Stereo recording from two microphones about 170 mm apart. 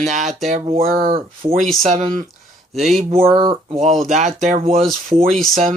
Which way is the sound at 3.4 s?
35° right (ahead or behind).